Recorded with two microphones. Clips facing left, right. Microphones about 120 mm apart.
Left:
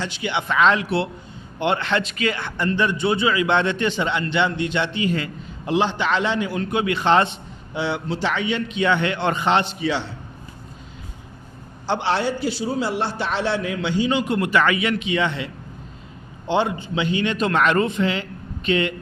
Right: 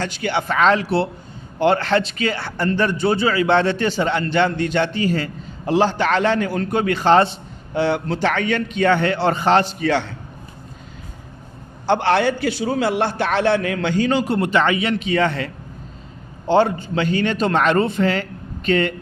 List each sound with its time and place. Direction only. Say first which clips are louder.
0.0 s a man's voice: right 3 dB; 45° right (ahead or behind)
7.7 s a man's voice: right 5 dB; 50° right (ahead or behind)
11.9 s a man's voice: right 5 dB; 60° right (ahead or behind)
16.5 s a man's voice: right 5 dB; 45° right (ahead or behind)